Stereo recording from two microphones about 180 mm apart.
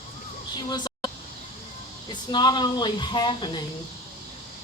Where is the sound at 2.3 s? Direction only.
25° left (ahead or behind).